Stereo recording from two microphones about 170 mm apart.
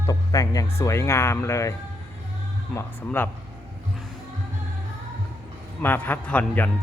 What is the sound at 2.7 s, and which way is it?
Speech, 15° left (ahead or behind).